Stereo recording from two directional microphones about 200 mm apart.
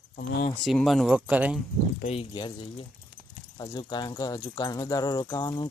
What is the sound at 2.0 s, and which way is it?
Speech, 30° left (ahead or behind).